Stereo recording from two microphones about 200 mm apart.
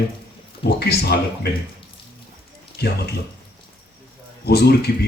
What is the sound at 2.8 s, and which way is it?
Speech, 55° left (ahead or behind).